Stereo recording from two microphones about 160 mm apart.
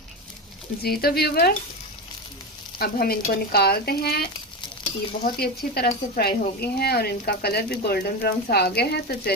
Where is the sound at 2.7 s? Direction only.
70° left (ahead or behind).